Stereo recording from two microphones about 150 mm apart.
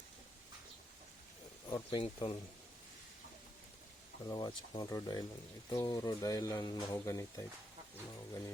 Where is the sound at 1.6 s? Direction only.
30° left (ahead or behind).